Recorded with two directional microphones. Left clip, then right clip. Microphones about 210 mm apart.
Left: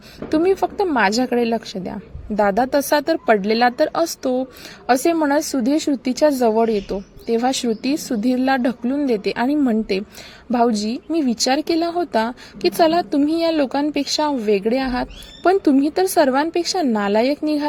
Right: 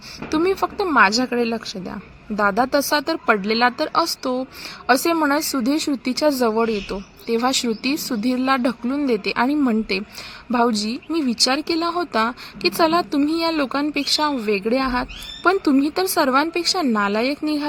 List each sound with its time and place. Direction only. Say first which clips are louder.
0.3 s speech: left 3 dB; 5° left (ahead or behind)